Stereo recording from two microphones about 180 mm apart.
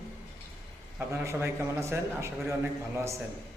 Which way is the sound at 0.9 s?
15° right (ahead or behind).